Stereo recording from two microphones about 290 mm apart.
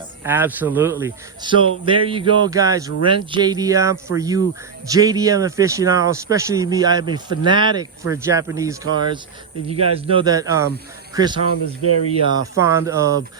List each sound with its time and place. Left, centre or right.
0.3 s speech: centre
11.8 s speech: left
12.5 s speech: centre